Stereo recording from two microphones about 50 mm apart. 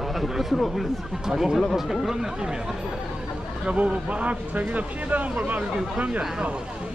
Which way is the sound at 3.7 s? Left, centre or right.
Right.